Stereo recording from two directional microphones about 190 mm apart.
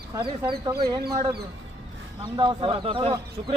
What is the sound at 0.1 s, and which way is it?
Speech, 25° right (ahead or behind).